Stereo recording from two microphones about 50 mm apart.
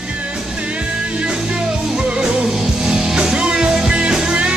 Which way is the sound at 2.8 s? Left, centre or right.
Centre.